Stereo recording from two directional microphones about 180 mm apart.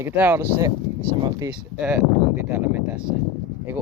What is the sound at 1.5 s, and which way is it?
Speech, 10° right (ahead or behind).